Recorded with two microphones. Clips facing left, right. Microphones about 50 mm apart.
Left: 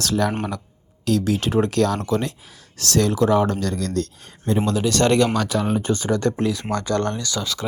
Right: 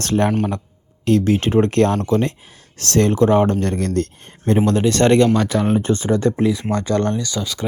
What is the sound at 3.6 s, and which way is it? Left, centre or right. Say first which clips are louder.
Speech: right 4 dB; right.